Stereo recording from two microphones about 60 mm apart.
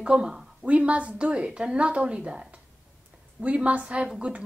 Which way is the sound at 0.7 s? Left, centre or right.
Right.